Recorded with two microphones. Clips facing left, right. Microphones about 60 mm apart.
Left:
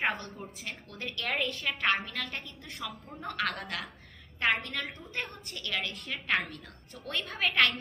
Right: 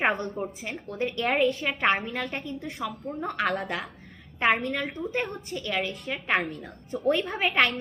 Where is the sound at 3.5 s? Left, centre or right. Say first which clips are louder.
Right 7 dB; centre.